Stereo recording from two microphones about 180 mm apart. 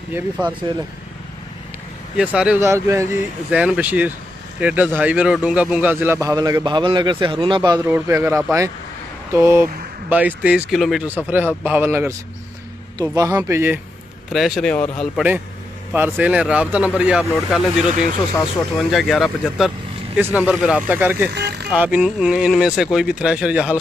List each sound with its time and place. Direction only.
0.1 s a man's voice: 5° right (ahead or behind)
2.1 s a man's voice: 5° right (ahead or behind)
14.3 s speech: centre (ahead or behind)
15.9 s speech: 10° right (ahead or behind)
18.9 s speech: centre (ahead or behind)
20.2 s a man's voice: 10° right (ahead or behind)
21.3 s vehicle: 65° right (ahead or behind)
21.6 s speech: 5° right (ahead or behind)